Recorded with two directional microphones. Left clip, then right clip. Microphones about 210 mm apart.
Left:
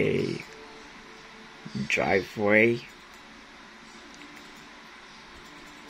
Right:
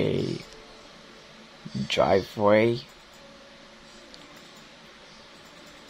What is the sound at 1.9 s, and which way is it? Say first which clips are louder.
Speech: right 4 dB; 15° right (ahead or behind).